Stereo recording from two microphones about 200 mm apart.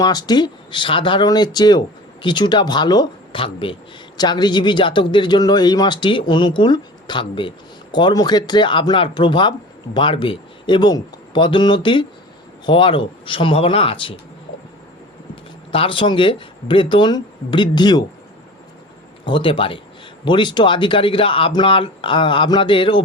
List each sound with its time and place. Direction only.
0.0 s speech: 20° left (ahead or behind)
15.7 s speech: 25° left (ahead or behind)
19.2 s speech: 25° left (ahead or behind)